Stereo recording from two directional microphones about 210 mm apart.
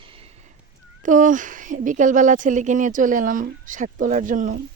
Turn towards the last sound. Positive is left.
turn(degrees=-40)  # may be behind; listen again after turning